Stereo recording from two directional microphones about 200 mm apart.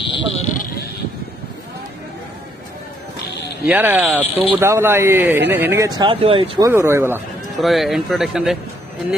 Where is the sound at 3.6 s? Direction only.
10° right (ahead or behind).